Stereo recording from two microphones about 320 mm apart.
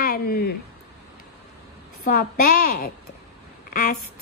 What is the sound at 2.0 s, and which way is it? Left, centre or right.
Speech, left.